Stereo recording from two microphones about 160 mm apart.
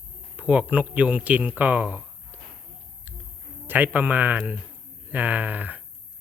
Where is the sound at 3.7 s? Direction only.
10° right (ahead or behind).